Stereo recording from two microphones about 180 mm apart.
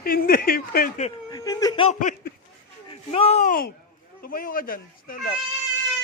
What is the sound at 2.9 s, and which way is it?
Speech, 30° left (ahead or behind).